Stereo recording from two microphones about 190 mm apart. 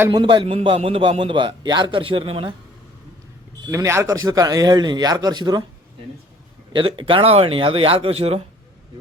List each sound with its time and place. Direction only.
0.0 s a man's voice: 20° right (ahead or behind)
3.7 s a man's voice: 15° right (ahead or behind)
6.7 s a man's voice: 25° right (ahead or behind)